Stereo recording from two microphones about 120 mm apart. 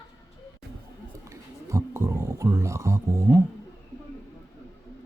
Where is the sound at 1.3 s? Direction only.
25° right (ahead or behind).